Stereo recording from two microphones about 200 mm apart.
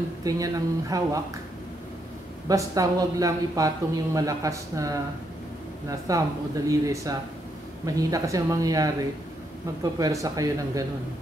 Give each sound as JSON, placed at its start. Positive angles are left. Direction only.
{"t": 0.2, "sound": "speech", "side_deg": -20}
{"t": 2.4, "sound": "speech", "side_deg": -15}
{"t": 9.9, "sound": "speech", "side_deg": -20}